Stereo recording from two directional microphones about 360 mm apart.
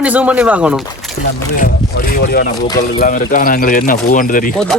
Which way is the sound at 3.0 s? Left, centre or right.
Left.